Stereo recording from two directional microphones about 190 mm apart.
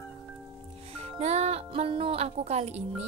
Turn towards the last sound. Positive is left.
turn(degrees=-35)  # may be behind; listen again after turning